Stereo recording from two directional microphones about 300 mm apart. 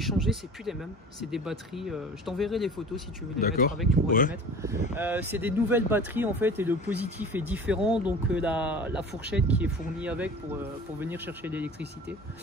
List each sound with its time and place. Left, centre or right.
0.0 s speech: centre
3.3 s speech: left
4.3 s speech: centre